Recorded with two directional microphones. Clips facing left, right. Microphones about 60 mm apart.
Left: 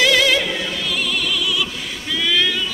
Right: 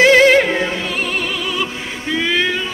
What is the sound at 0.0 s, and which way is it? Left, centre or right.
Opera, right.